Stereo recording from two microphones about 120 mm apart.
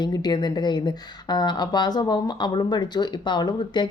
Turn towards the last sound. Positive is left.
turn(degrees=40)  # may be behind; listen again after turning